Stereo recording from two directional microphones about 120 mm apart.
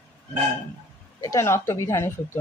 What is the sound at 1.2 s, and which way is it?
Speech, 25° left (ahead or behind).